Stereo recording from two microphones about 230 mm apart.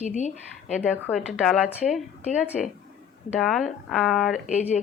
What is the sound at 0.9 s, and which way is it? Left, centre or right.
A woman's voice, centre.